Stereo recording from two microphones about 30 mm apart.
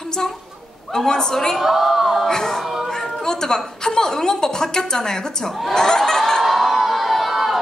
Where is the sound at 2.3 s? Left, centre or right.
Centre.